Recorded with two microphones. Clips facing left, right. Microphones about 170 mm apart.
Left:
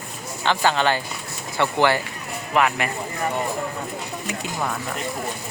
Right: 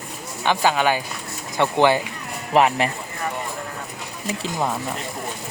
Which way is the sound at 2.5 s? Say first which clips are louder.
Right 4 dB; 30° right (ahead or behind).